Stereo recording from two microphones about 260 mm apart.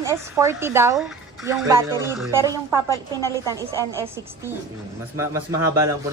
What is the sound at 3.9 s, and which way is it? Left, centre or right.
Speech, centre.